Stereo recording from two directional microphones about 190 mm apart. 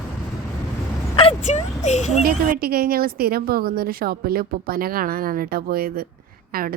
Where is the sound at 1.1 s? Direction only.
30° left (ahead or behind).